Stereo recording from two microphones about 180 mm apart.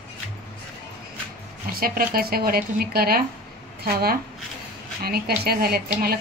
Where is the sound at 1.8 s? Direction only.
55° right (ahead or behind).